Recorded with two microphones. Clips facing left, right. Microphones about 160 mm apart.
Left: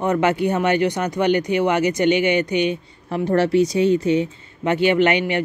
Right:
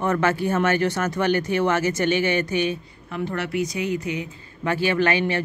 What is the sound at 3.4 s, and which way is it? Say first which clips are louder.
Speech: left 10 dB; 30° left (ahead or behind).